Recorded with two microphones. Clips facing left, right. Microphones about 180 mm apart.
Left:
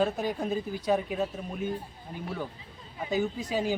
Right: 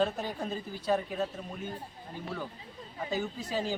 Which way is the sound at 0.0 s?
10° left (ahead or behind).